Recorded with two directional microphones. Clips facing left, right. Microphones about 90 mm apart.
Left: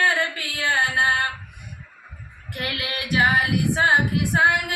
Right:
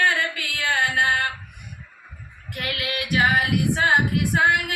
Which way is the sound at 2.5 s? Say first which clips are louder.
Right 1 dB; 30° left (ahead or behind).